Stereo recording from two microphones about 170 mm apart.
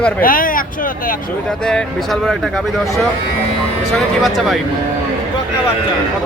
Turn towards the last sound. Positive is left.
turn(degrees=0)  # may be behind; listen again after turning